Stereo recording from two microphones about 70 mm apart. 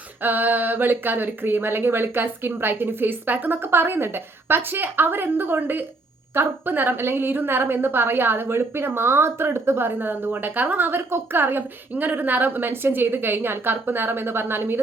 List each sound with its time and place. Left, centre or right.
0.2 s a woman's voice: right